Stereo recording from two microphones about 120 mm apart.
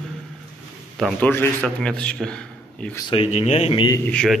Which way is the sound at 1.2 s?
15° left (ahead or behind).